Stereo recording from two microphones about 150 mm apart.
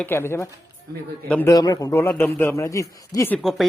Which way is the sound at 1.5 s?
25° left (ahead or behind).